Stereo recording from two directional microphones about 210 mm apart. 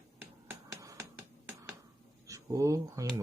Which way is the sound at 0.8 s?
15° right (ahead or behind).